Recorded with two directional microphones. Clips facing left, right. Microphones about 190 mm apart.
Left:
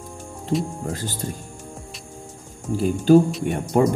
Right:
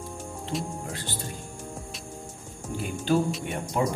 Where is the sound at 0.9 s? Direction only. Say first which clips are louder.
Left 5 dB; 45° left (ahead or behind).